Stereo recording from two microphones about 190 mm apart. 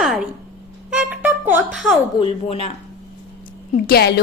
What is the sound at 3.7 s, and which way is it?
Speech, 50° left (ahead or behind).